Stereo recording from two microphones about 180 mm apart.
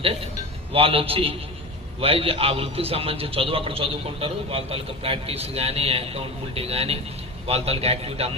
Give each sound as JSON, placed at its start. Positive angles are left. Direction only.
{"t": 0.0, "sound": "a man's voice", "side_deg": -30}